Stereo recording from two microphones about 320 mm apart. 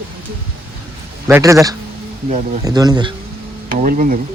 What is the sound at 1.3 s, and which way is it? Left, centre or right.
Speech, centre.